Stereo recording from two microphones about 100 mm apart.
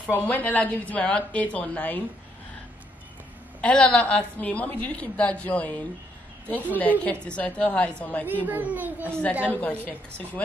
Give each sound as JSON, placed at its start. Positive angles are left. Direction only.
{"t": 0.1, "sound": "a woman's voice", "side_deg": 15}
{"t": 3.6, "sound": "a woman's voice", "side_deg": 10}
{"t": 8.3, "sound": "a child's voice", "side_deg": -20}
{"t": 9.8, "sound": "a woman's voice", "side_deg": 15}